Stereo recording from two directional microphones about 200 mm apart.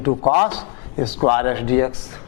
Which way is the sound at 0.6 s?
25° left (ahead or behind).